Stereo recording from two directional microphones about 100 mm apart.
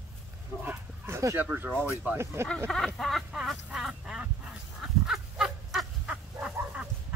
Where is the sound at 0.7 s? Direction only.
25° right (ahead or behind).